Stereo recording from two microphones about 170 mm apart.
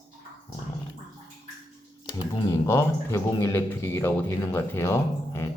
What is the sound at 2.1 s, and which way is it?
Speech, 20° left (ahead or behind).